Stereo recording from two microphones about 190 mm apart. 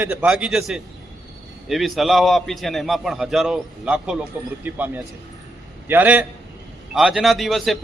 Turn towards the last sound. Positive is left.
turn(degrees=0)  # may be behind; listen again after turning